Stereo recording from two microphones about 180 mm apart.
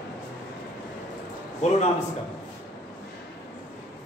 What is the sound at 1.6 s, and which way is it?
Speech, 40° left (ahead or behind).